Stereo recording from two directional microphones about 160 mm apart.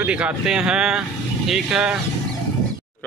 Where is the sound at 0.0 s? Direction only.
10° right (ahead or behind).